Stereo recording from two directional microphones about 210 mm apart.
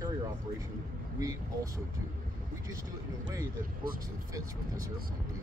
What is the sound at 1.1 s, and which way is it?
Speech, 15° right (ahead or behind).